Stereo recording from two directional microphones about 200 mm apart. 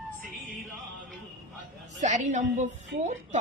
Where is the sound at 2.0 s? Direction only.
35° right (ahead or behind).